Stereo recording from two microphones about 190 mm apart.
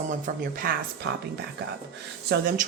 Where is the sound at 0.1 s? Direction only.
50° right (ahead or behind).